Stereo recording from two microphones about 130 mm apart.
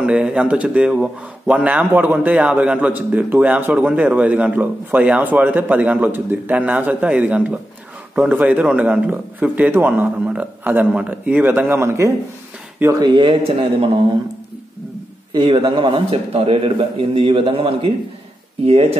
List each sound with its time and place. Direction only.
0.0 s speech: 10° right (ahead or behind)
13.0 s a man's voice: 35° right (ahead or behind)
15.3 s a man's voice: 35° right (ahead or behind)